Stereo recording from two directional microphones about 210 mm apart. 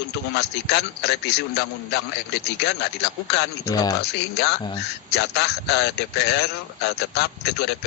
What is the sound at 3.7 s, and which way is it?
Speech, 15° left (ahead or behind).